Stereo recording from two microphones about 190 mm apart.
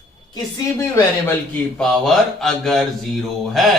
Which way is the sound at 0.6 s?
15° left (ahead or behind).